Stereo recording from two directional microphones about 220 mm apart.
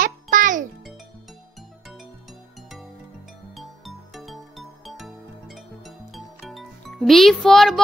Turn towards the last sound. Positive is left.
turn(degrees=0)  # may be behind; listen again after turning